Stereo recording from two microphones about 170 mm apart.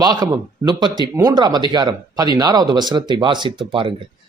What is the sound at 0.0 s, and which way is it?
Speech, 25° right (ahead or behind).